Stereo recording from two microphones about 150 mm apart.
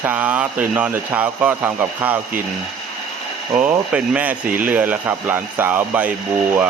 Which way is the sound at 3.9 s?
10° right (ahead or behind).